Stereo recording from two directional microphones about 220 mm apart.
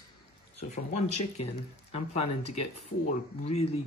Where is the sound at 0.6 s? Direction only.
30° left (ahead or behind).